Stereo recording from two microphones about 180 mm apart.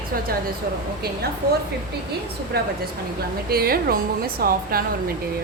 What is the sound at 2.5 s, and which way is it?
A woman's voice, 60° right (ahead or behind).